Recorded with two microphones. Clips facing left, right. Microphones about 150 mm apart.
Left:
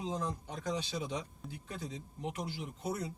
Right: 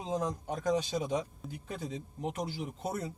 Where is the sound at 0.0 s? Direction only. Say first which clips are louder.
Right 4 dB; 45° right (ahead or behind).